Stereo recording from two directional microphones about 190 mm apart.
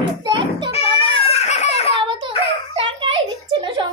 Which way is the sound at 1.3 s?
35° left (ahead or behind).